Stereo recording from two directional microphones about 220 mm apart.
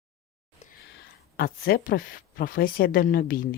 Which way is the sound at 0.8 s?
45° left (ahead or behind).